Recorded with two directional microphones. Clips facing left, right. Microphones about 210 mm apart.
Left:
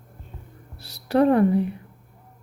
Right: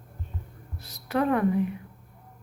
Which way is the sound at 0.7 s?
35° left (ahead or behind).